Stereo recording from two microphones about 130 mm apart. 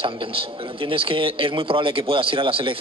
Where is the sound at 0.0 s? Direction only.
45° right (ahead or behind).